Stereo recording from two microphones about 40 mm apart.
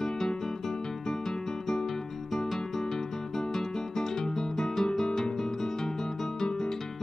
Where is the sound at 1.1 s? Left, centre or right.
Centre.